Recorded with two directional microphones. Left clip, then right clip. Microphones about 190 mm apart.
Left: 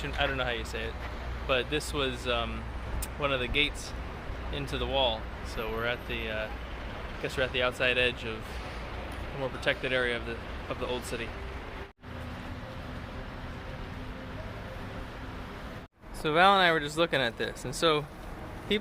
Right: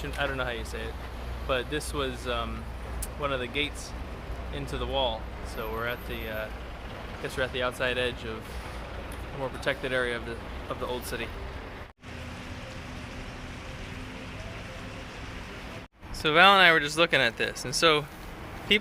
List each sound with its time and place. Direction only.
0.0 s speech: 20° left (ahead or behind)
9.6 s speech: 10° left (ahead or behind)
16.2 s speech: centre (ahead or behind)